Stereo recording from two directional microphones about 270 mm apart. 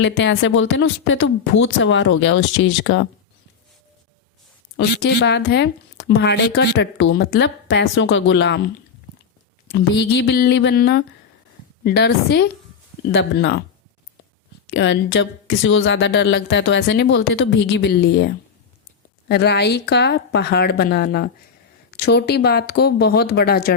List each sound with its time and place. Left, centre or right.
0.0 s a woman's voice: left
4.8 s speech: left
9.7 s speech: left
14.7 s speech: left
19.3 s speech: left